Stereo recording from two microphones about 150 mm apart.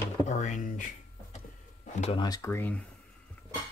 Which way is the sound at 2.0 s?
35° left (ahead or behind).